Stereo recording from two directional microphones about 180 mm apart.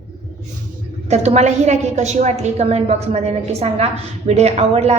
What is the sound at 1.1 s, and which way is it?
A woman's voice, 40° right (ahead or behind).